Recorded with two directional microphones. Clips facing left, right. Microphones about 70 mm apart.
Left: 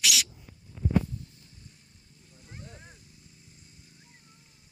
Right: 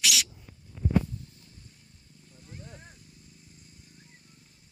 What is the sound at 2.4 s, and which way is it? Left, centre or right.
Vehicle, left.